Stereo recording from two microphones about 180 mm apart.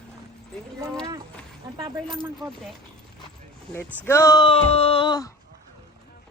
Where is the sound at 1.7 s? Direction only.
20° right (ahead or behind).